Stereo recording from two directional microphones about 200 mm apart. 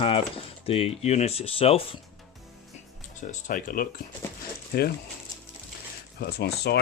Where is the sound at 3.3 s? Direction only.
45° left (ahead or behind).